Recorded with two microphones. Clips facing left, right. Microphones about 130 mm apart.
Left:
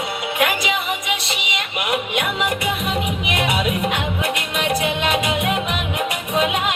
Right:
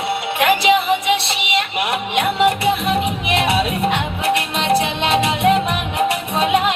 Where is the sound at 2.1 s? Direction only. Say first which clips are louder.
Right 6 dB; 30° right (ahead or behind).